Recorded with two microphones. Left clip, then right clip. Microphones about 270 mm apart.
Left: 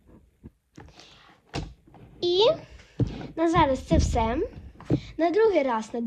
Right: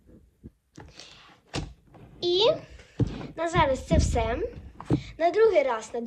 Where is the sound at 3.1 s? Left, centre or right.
Centre.